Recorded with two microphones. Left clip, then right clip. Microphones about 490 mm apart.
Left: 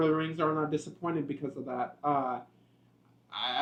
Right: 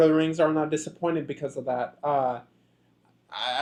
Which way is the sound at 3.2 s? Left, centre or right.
Right.